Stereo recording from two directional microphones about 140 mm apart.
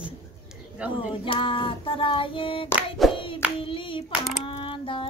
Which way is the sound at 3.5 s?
40° left (ahead or behind).